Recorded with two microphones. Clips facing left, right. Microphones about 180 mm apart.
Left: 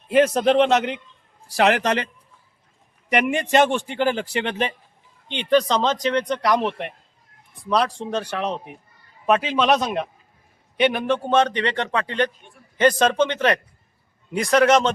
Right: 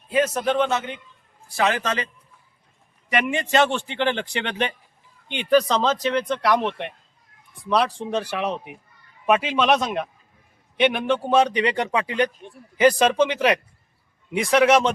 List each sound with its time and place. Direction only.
0.3 s a man's voice: 75° left (ahead or behind)
3.4 s speech: 15° left (ahead or behind)
5.3 s a man's voice: 10° right (ahead or behind)